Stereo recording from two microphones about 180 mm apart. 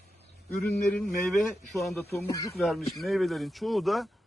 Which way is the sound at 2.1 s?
20° left (ahead or behind).